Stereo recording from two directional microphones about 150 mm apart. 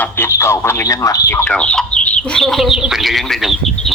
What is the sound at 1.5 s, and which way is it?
Speech, 5° left (ahead or behind).